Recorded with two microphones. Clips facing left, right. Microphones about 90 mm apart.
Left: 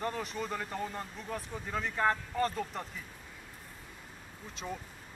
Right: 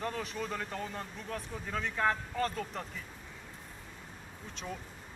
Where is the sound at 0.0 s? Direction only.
Centre (ahead or behind).